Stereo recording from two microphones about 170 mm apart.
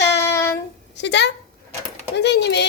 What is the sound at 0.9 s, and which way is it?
Speech, 90° left.